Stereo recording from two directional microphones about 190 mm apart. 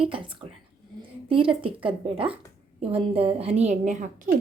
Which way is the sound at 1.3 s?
25° right (ahead or behind).